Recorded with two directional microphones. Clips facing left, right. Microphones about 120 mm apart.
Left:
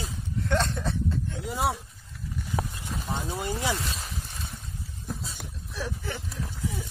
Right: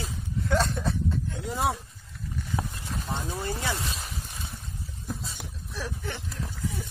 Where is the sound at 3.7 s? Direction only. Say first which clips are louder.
Left 1 dB; centre (ahead or behind).